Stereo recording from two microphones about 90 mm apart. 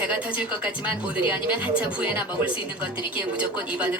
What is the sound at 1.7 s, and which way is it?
Speech, 15° right (ahead or behind).